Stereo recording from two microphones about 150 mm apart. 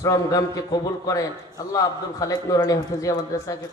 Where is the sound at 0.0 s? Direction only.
20° left (ahead or behind).